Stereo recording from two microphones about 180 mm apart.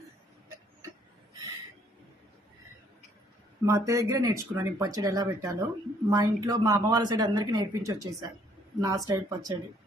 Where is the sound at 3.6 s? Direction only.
15° right (ahead or behind).